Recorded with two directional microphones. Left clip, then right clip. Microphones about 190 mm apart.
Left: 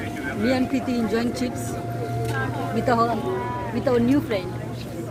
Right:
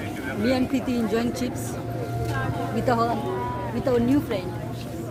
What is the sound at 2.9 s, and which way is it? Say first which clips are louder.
Speech: left 2 dB; 10° left (ahead or behind).